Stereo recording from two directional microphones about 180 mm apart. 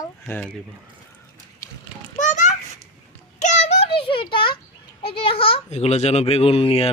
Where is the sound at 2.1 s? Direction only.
45° left (ahead or behind); by 4.6 s 30° left (ahead or behind).